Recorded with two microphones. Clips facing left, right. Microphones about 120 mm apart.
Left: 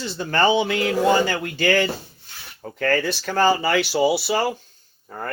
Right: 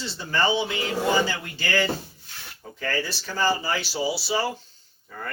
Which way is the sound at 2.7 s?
70° left (ahead or behind).